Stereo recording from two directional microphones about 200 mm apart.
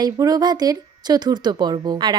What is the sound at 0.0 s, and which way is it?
Speech, 20° right (ahead or behind).